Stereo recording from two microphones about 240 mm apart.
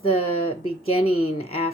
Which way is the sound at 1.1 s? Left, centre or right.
Left.